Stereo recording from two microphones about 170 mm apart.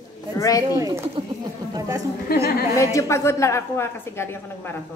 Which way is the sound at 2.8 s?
20° left (ahead or behind).